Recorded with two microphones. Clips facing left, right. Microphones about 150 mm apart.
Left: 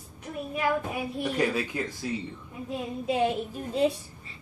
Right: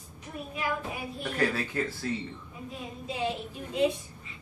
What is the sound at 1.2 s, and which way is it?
Speech, 15° left (ahead or behind).